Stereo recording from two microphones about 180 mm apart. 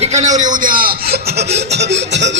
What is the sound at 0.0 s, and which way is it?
Chuckle, 40° right (ahead or behind).